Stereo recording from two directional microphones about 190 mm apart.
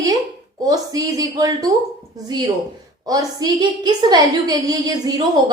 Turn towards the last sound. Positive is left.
turn(degrees=-20)  # may be behind; listen again after turning